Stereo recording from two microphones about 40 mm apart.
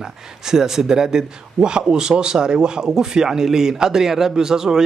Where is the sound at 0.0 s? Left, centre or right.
Centre.